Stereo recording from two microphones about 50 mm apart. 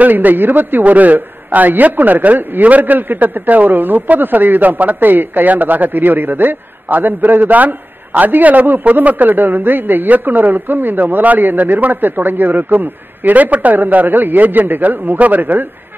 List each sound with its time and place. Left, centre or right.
0.0 s a man's voice: right